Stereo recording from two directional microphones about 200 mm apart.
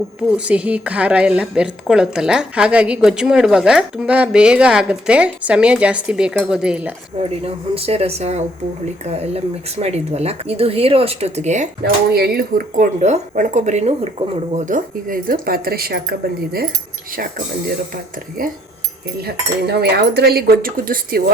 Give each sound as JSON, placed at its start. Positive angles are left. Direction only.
{"t": 0.2, "sound": "a woman's voice", "side_deg": -5}
{"t": 7.2, "sound": "speech", "side_deg": -30}
{"t": 11.8, "sound": "speech", "side_deg": -50}
{"t": 19.2, "sound": "speech", "side_deg": -55}